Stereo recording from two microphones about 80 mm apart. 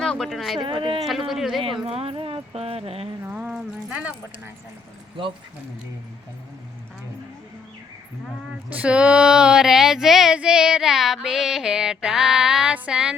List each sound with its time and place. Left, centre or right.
0.0 s speech: centre
0.6 s speech: right
1.0 s speech: centre
2.1 s a sound: right
3.2 s a sound: centre
5.2 s speech: right
8.7 s speech: centre